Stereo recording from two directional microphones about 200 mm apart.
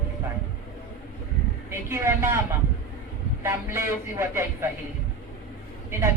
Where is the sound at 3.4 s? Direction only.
10° right (ahead or behind).